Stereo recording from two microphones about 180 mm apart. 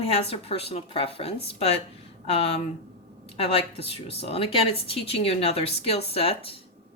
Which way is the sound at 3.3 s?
30° left (ahead or behind).